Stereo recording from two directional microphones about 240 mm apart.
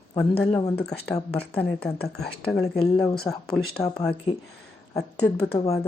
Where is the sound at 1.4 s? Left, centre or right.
Left.